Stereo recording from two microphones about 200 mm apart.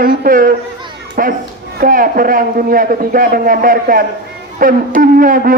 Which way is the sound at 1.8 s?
45° right (ahead or behind).